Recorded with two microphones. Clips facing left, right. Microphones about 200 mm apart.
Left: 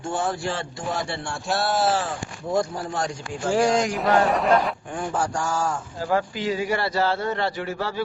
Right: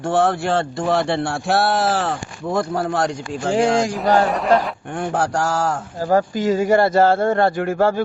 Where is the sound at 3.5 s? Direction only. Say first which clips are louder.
Right 3 dB; 25° right (ahead or behind).